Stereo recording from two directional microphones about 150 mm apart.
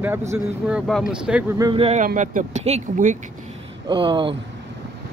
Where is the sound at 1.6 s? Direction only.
30° right (ahead or behind).